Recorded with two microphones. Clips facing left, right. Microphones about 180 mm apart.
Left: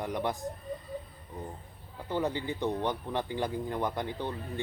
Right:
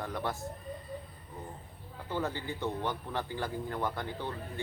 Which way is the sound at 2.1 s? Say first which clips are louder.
Left 4 dB; 15° left (ahead or behind).